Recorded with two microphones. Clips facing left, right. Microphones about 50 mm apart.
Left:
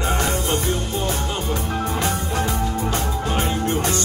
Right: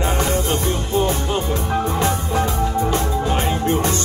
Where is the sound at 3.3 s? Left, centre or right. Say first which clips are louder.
Right 1 dB; right.